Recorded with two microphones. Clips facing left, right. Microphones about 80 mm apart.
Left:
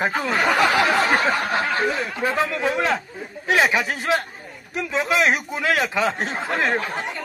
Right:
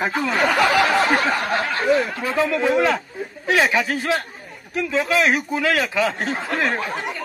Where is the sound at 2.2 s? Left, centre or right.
Left.